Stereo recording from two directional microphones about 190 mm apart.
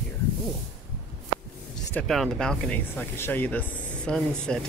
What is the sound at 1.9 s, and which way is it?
Speech, 5° left (ahead or behind).